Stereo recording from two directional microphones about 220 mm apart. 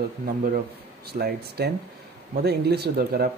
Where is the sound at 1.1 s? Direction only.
45° right (ahead or behind).